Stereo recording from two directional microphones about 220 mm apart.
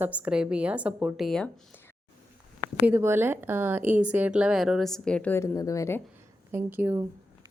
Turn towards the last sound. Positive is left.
turn(degrees=-10)  # may be behind; listen again after turning